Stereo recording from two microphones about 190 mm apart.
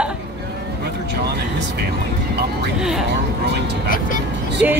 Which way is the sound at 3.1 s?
65° right (ahead or behind).